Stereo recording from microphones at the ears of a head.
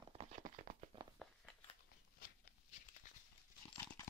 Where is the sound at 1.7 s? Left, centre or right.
Left.